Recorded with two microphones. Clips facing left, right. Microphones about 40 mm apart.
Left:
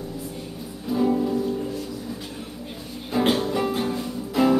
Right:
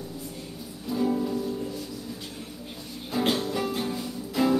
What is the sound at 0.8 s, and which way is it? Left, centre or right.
Music, centre.